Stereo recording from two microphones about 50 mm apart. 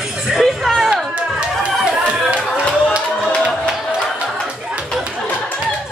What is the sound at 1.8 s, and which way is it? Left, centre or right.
Chatter, centre.